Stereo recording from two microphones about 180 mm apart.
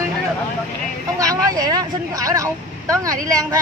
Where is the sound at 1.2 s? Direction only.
20° right (ahead or behind).